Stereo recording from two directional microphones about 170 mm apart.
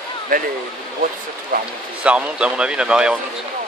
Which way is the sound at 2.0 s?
5° right (ahead or behind).